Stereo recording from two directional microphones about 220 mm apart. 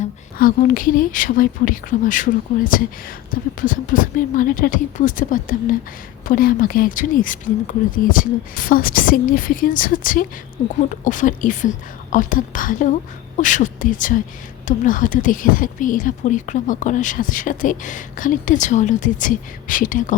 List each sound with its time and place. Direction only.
0.3 s speech: 40° left (ahead or behind)